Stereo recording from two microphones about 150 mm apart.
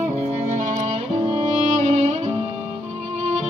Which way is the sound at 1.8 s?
50° right (ahead or behind).